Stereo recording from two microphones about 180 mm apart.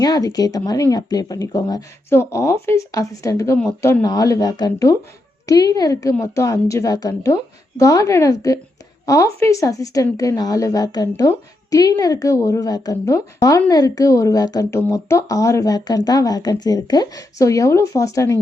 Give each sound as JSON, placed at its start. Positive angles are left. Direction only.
{"t": 0.0, "sound": "a woman's voice", "side_deg": 20}